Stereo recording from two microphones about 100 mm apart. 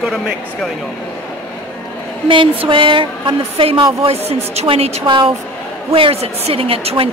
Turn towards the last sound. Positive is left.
turn(degrees=-70)  # may be behind; listen again after turning